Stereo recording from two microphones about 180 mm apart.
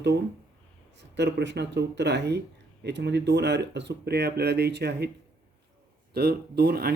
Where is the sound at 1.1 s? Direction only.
75° right (ahead or behind).